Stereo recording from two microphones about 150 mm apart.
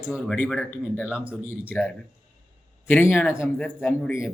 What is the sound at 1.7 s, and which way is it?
Speech, 10° left (ahead or behind).